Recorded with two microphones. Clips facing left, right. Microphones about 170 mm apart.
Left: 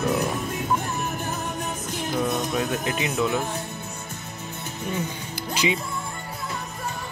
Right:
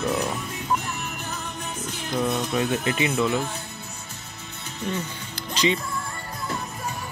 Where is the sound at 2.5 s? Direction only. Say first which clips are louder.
Right 1 dB; centre (ahead or behind).